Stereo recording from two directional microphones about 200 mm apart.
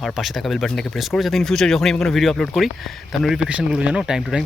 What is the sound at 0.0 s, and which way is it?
Speech, centre (ahead or behind).